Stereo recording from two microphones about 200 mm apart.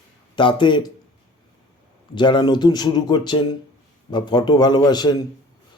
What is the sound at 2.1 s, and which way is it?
Speech, 20° left (ahead or behind).